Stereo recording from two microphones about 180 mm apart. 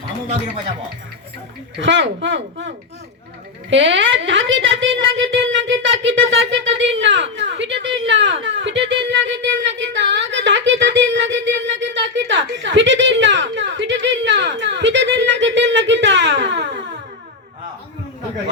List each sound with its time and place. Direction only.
1.8 s a woman's voice: 90° right